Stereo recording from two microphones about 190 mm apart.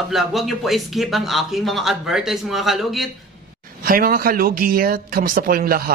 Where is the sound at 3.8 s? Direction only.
50° right (ahead or behind).